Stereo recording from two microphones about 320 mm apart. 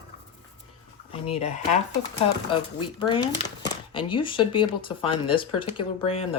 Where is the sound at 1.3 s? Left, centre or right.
Left.